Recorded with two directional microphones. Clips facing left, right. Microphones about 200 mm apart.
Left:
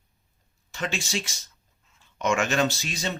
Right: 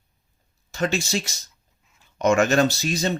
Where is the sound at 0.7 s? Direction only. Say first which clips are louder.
Right 6 dB; 40° right (ahead or behind).